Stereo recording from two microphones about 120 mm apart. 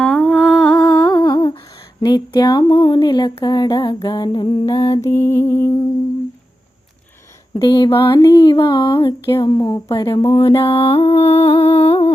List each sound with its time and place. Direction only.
0.0 s humming: 10° left (ahead or behind)
0.3 s humming: 5° right (ahead or behind)
0.8 s humming: 20° left (ahead or behind)
1.2 s humming: 35° left (ahead or behind)
4.0 s a sound: 40° left (ahead or behind)
5.0 s humming: 25° left (ahead or behind)
7.6 s a sound: 35° left (ahead or behind)
10.2 s music: 50° left (ahead or behind)